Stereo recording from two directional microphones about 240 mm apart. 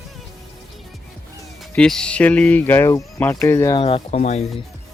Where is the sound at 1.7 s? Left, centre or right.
Centre; by 4.4 s left.